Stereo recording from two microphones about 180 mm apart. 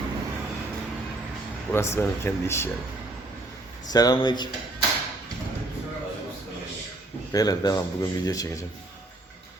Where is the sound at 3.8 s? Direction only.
20° left (ahead or behind).